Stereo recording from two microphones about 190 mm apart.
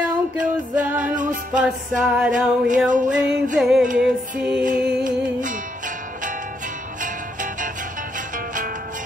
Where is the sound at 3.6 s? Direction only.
Centre (ahead or behind).